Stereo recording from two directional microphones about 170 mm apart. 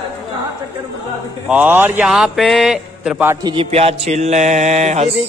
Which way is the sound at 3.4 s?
35° right (ahead or behind).